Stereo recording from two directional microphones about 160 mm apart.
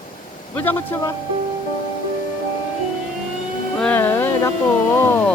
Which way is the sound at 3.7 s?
10° left (ahead or behind).